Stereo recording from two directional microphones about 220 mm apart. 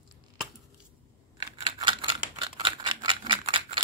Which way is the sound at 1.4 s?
20° right (ahead or behind).